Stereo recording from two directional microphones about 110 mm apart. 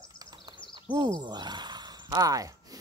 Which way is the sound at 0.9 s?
40° right (ahead or behind).